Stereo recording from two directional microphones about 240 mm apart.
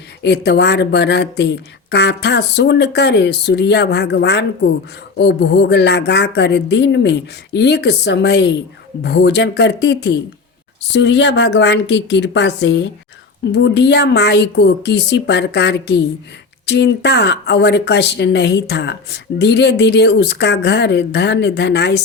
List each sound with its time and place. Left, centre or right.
0.2 s speech: left